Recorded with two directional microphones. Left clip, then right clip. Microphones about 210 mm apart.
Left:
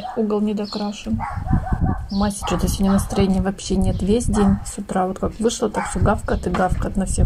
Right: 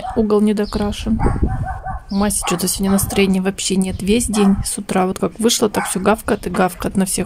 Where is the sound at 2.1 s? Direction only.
30° right (ahead or behind).